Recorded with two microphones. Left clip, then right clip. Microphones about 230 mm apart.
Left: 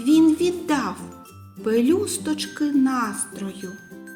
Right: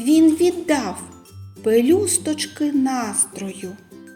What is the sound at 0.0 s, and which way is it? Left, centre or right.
Speech, centre.